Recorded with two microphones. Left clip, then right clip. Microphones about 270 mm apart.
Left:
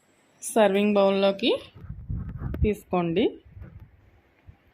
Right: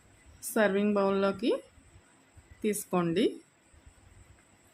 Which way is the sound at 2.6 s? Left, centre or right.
Centre.